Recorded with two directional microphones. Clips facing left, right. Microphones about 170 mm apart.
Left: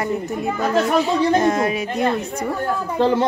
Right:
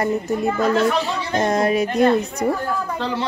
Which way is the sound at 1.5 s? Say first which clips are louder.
Right 1 dB; 40° right (ahead or behind).